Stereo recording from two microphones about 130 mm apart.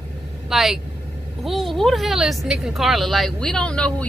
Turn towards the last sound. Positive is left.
turn(degrees=10)  # may be behind; listen again after turning